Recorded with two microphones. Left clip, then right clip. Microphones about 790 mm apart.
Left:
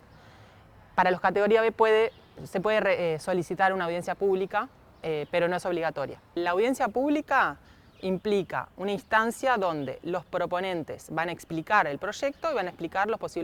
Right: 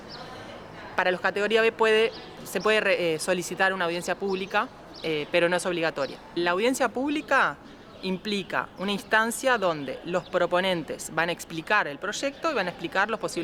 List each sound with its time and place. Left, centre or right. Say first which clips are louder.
0.9 s speech: left 1 dB; left